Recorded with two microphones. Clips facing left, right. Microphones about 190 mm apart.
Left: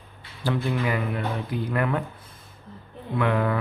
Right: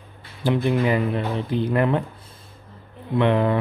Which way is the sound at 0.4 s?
20° right (ahead or behind).